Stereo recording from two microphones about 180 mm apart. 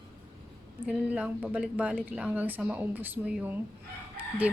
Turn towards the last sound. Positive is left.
turn(degrees=-10)  # may be behind; listen again after turning